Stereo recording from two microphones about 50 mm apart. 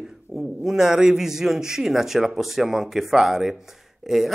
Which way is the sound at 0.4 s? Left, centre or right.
Centre.